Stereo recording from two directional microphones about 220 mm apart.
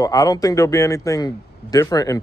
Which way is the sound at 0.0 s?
15° left (ahead or behind).